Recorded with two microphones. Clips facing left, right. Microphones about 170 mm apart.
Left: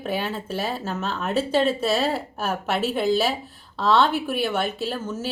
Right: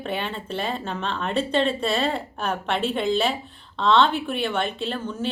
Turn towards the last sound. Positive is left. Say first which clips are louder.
# even
turn(degrees=5)  # may be behind; listen again after turning